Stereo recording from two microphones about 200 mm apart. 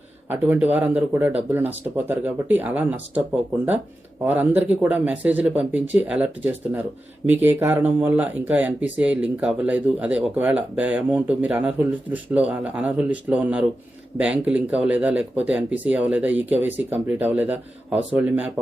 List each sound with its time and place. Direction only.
0.3 s speech: 10° right (ahead or behind)
4.3 s speech: 10° right (ahead or behind)